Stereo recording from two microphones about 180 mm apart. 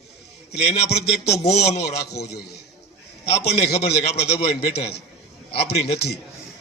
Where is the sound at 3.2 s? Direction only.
35° left (ahead or behind).